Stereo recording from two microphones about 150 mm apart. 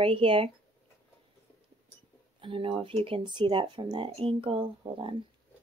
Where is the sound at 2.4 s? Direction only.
35° right (ahead or behind).